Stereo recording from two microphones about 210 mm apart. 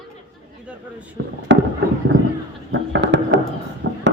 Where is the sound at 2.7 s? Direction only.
60° right (ahead or behind).